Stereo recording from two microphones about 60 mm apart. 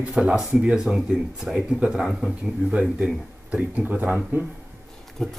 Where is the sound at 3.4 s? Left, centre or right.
Right.